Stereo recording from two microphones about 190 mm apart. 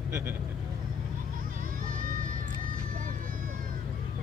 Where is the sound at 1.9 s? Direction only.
45° right (ahead or behind).